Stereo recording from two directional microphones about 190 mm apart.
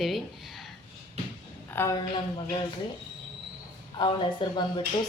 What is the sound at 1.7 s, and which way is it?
Speech, 10° left (ahead or behind).